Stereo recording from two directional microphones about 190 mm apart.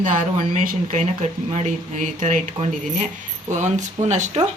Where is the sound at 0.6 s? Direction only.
40° right (ahead or behind).